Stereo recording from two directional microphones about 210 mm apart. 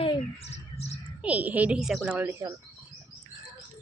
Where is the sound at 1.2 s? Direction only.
5° right (ahead or behind).